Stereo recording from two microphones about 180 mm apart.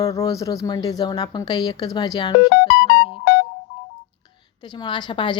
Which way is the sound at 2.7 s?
65° left (ahead or behind).